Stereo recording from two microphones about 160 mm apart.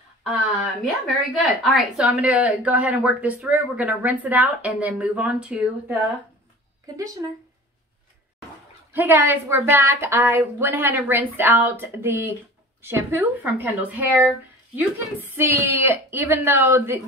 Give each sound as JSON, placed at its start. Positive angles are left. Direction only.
{"t": 1.0, "sound": "a woman's voice", "side_deg": 0}
{"t": 7.2, "sound": "a woman's voice", "side_deg": -15}
{"t": 8.9, "sound": "a woman's voice", "side_deg": -15}